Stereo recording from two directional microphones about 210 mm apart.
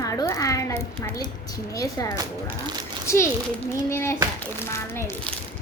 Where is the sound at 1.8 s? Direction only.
15° left (ahead or behind).